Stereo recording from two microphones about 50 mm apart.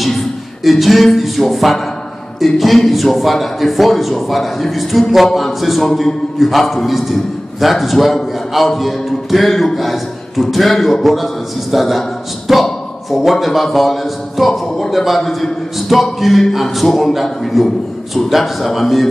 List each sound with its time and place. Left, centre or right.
0.7 s a man's voice: centre